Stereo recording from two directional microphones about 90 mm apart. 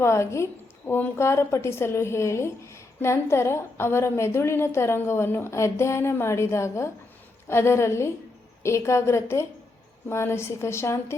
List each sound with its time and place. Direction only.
0.0 s a woman's voice: 30° left (ahead or behind)